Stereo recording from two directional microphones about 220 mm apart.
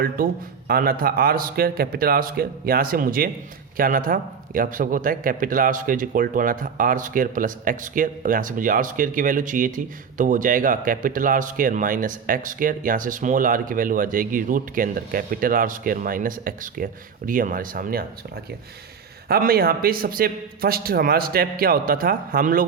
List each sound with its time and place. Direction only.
0.2 s speech: 40° right (ahead or behind)
19.3 s a man's voice: 45° right (ahead or behind)